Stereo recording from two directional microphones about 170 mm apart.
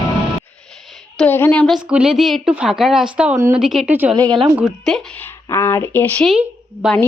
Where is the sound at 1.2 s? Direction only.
10° left (ahead or behind).